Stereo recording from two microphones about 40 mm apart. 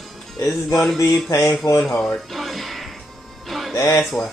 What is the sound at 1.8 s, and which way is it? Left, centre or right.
Speech, centre.